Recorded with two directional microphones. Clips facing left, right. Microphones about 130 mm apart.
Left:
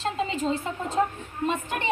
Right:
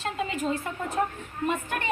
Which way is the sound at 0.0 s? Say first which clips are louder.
Left 2 dB; 25° left (ahead or behind).